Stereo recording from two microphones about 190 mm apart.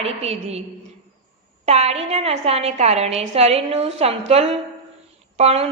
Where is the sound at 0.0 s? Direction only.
30° right (ahead or behind).